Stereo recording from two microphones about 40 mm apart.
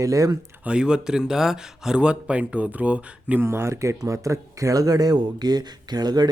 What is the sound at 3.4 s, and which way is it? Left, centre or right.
Speech, right.